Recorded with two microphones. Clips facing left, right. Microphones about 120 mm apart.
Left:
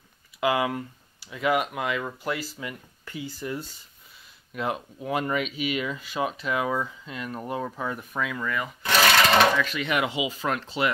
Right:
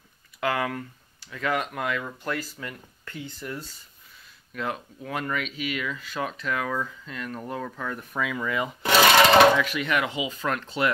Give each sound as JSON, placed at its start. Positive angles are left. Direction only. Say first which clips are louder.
{"t": 0.4, "sound": "speech", "louder": "left 2 dB", "side_deg": 15}
{"t": 4.6, "sound": "speech", "louder": "left 2 dB", "side_deg": 15}
{"t": 8.1, "sound": "speech", "louder": "right 1 dB", "side_deg": 0}
{"t": 8.5, "sound": "speech", "louder": "right 2 dB", "side_deg": -20}
{"t": 9.6, "sound": "speech", "louder": "right 1 dB", "side_deg": -10}
{"t": 9.8, "sound": "speech", "louder": "left 1 dB", "side_deg": 10}